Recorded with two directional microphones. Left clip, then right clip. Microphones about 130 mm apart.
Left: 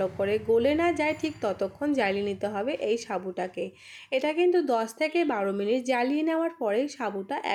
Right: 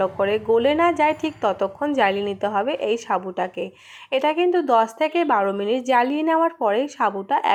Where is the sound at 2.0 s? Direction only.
20° left (ahead or behind).